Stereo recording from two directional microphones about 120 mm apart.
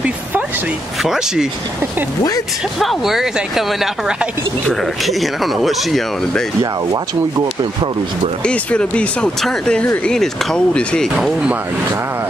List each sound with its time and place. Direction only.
1.0 s speech: 5° right (ahead or behind)
2.8 s speech: centre (ahead or behind)
6.6 s speech: 30° right (ahead or behind)
8.5 s speech: 10° left (ahead or behind)
11.1 s speech: centre (ahead or behind)